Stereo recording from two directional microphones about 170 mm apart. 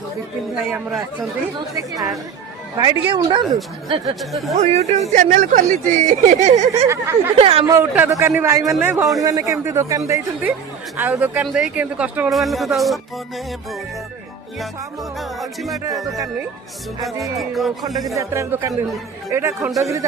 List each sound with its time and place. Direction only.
0.7 s a man's voice: 15° right (ahead or behind)
4.1 s speech: centre (ahead or behind)
4.6 s speech: 40° right (ahead or behind)
6.8 s a man's voice: 15° right (ahead or behind)
7.3 s speech: 35° right (ahead or behind)
7.7 s a man's voice: 15° right (ahead or behind)
15.2 s speech: centre (ahead or behind)
15.8 s a man's voice: 20° right (ahead or behind)
17.3 s speech: centre (ahead or behind)
18.2 s a man's voice: 15° right (ahead or behind)